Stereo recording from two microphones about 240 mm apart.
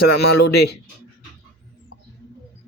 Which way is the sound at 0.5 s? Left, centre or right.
Left.